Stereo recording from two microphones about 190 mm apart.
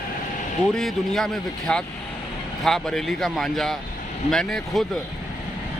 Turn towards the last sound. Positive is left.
turn(degrees=0)  # may be behind; listen again after turning